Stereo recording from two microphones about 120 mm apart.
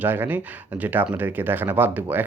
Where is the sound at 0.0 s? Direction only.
15° right (ahead or behind).